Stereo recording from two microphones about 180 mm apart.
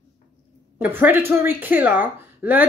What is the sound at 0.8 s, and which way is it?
A woman's voice, 10° right (ahead or behind).